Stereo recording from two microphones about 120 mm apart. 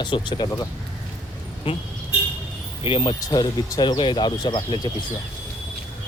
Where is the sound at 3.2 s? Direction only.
30° left (ahead or behind).